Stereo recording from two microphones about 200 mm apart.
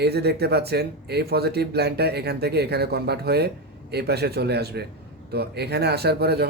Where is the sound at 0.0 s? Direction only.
55° right (ahead or behind).